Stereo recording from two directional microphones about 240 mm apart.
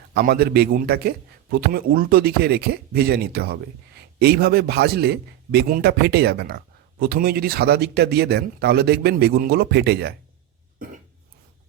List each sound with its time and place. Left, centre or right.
0.1 s a man's voice: right
10.8 s cough: right